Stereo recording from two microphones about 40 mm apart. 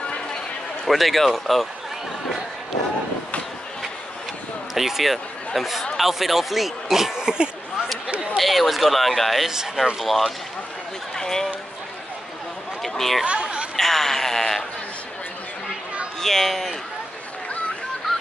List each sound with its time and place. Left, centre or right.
0.8 s speech: centre
4.7 s speech: centre
8.4 s speech: centre
11.1 s speech: centre
12.8 s speech: centre
13.2 s speech: right
13.7 s a sound: centre
16.2 s speech: centre